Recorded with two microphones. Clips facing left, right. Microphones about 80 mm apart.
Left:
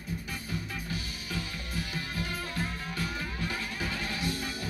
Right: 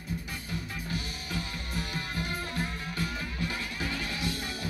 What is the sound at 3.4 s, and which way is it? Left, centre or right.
Music, left.